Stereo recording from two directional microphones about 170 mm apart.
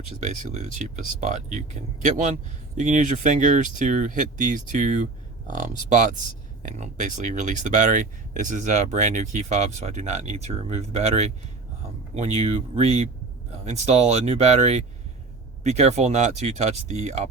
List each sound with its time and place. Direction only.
0.2 s speech: 45° right (ahead or behind)